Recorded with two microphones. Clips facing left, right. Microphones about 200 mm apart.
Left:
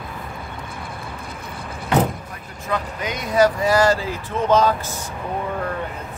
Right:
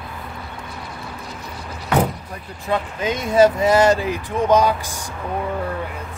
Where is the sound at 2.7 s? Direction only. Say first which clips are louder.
Right 4 dB; 25° right (ahead or behind).